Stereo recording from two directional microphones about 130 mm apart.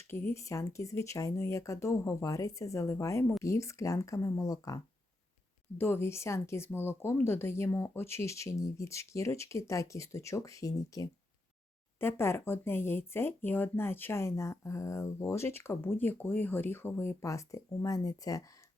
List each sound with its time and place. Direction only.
0.1 s speech: 20° left (ahead or behind)
5.7 s speech: 15° left (ahead or behind)